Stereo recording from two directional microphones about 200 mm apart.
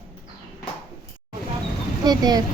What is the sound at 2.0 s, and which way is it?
Speech, 20° right (ahead or behind).